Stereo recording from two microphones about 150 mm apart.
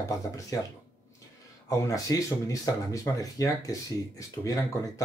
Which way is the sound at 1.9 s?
20° left (ahead or behind).